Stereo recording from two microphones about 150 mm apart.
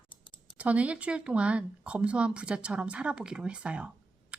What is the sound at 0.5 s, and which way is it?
A woman's voice, 10° right (ahead or behind).